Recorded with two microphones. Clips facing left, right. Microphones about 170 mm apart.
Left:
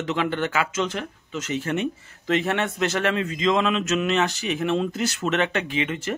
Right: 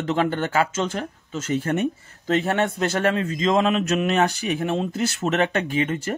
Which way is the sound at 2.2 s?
35° right (ahead or behind).